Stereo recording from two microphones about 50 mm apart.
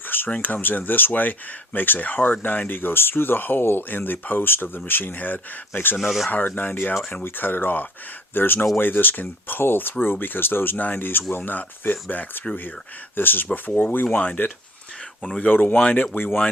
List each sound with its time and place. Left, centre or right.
0.4 s speech: left
6.0 s speech: centre
6.3 s speech: left